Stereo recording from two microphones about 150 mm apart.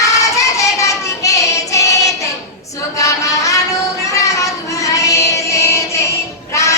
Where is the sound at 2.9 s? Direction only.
20° left (ahead or behind).